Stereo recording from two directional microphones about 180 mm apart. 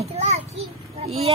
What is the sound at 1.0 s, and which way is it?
Vehicle, 35° right (ahead or behind).